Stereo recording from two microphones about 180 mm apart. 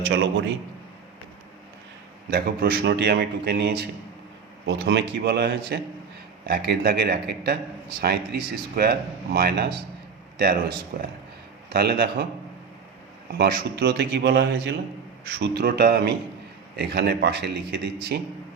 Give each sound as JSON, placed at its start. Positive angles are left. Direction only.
{"t": 0.0, "sound": "a man's voice", "side_deg": -85}
{"t": 2.3, "sound": "speech", "side_deg": -60}
{"t": 13.3, "sound": "speech", "side_deg": -60}